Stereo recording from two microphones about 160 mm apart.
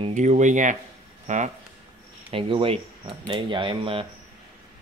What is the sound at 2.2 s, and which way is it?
Speech, 35° right (ahead or behind).